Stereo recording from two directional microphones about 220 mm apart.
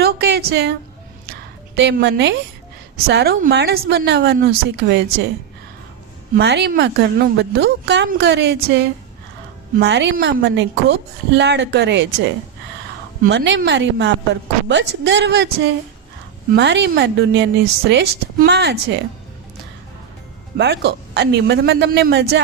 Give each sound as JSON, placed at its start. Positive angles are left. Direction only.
{"t": 0.0, "sound": "a sound", "side_deg": -45}
{"t": 3.1, "sound": "a woman's voice", "side_deg": -45}
{"t": 6.3, "sound": "a woman's voice", "side_deg": -50}
{"t": 20.6, "sound": "a woman's voice", "side_deg": -50}